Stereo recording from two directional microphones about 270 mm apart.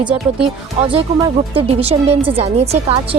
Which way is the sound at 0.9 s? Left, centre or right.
Right.